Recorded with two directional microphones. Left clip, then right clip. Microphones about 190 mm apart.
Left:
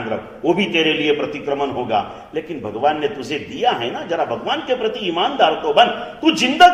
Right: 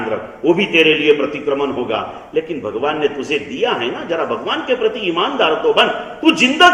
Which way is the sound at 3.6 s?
45° left (ahead or behind).